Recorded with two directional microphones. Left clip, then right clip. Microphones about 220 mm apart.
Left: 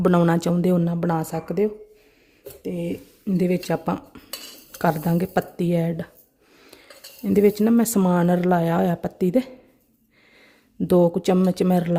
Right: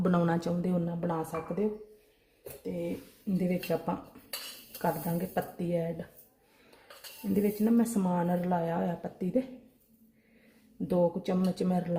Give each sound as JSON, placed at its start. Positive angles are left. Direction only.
{"t": 0.0, "sound": "speech", "side_deg": 35}
{"t": 3.3, "sound": "speech", "side_deg": 45}
{"t": 7.3, "sound": "speech", "side_deg": 50}
{"t": 10.8, "sound": "speech", "side_deg": 50}